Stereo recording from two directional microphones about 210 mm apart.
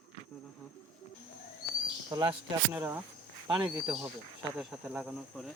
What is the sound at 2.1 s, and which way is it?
Speech, 20° right (ahead or behind).